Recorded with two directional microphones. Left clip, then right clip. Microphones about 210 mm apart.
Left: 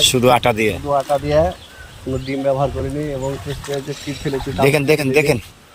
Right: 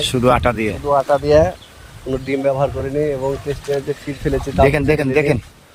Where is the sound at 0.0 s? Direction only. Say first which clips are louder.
Left 2 dB; 10° right (ahead or behind).